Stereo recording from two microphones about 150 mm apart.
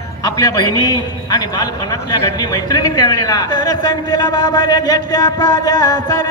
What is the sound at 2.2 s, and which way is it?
Speech, 25° left (ahead or behind).